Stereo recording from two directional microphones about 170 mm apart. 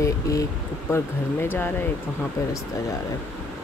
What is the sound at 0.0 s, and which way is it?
Speech, 20° left (ahead or behind).